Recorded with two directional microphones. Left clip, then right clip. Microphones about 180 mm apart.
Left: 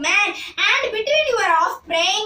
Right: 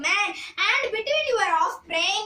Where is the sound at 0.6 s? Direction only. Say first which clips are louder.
Left 4 dB; 15° right (ahead or behind).